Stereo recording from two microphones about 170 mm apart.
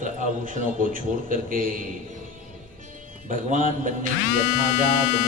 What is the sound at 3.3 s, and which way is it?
Speech, 45° right (ahead or behind).